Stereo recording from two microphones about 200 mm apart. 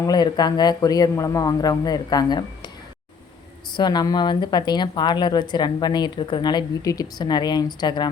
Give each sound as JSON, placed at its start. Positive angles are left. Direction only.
{"t": 0.0, "sound": "speech", "side_deg": 20}
{"t": 3.8, "sound": "speech", "side_deg": 20}